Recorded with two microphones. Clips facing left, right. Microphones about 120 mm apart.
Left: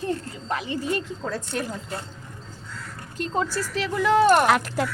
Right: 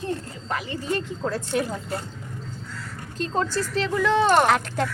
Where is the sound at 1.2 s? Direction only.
Centre (ahead or behind).